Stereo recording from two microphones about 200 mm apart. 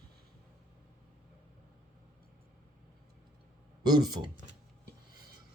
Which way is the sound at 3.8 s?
20° right (ahead or behind).